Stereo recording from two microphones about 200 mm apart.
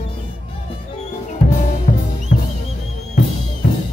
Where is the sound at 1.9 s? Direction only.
35° left (ahead or behind).